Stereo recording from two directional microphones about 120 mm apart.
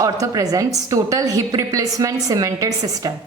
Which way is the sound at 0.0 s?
30° right (ahead or behind).